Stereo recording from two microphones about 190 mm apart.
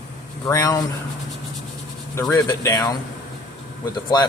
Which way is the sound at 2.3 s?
15° left (ahead or behind).